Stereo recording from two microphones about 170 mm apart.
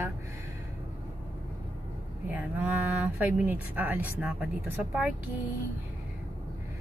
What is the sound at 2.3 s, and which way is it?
A woman's voice, 10° right (ahead or behind).